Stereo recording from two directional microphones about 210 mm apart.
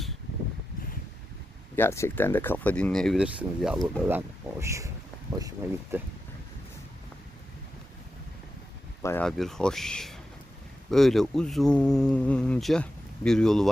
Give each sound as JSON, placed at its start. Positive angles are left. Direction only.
{"t": 1.7, "sound": "speech", "side_deg": 10}
{"t": 4.6, "sound": "speech", "side_deg": -15}
{"t": 9.0, "sound": "speech", "side_deg": 10}